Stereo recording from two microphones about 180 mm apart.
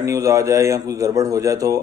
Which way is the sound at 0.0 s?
15° right (ahead or behind).